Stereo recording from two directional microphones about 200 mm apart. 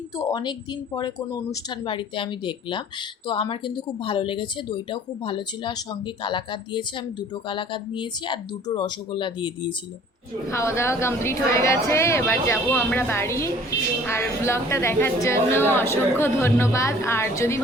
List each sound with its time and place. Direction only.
0.2 s speech: 20° left (ahead or behind)
10.5 s speech: 15° left (ahead or behind)